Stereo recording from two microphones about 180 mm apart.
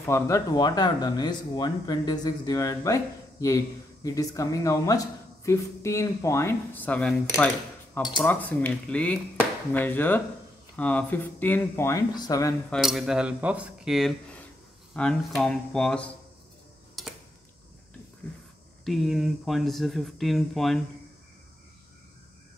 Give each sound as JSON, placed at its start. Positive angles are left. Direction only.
{"t": 0.0, "sound": "speech", "side_deg": 15}
{"t": 12.7, "sound": "speech", "side_deg": 0}
{"t": 17.0, "sound": "a sound", "side_deg": 0}
{"t": 18.9, "sound": "speech", "side_deg": 0}